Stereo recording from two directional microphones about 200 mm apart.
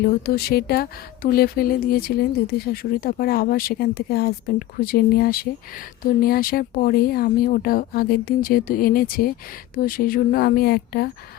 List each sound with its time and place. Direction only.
0.0 s speech: 50° left (ahead or behind)